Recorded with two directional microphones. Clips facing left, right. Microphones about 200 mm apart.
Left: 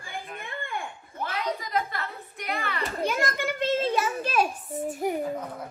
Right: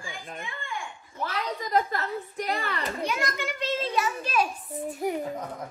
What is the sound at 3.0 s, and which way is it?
Children playing, 50° left (ahead or behind).